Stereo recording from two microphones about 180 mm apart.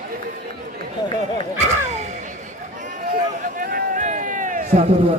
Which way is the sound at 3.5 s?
50° right (ahead or behind).